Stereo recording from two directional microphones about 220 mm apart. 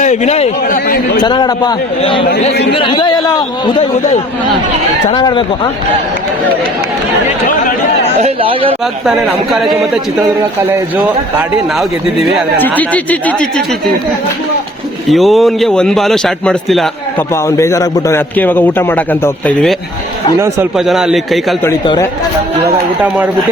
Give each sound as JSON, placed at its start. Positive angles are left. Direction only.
{"t": 0.0, "sound": "a man's voice", "side_deg": 30}
{"t": 0.9, "sound": "a man's voice", "side_deg": 45}
{"t": 1.2, "sound": "speech", "side_deg": 20}
{"t": 8.2, "sound": "speech", "side_deg": -25}
{"t": 9.0, "sound": "a man's voice", "side_deg": 0}
{"t": 11.3, "sound": "a man's voice", "side_deg": 0}
{"t": 15.1, "sound": "a man's voice", "side_deg": 0}
{"t": 17.3, "sound": "a man's voice", "side_deg": 15}
{"t": 20.4, "sound": "a man's voice", "side_deg": -5}
{"t": 21.6, "sound": "a man's voice", "side_deg": 15}
{"t": 23.0, "sound": "speech", "side_deg": -10}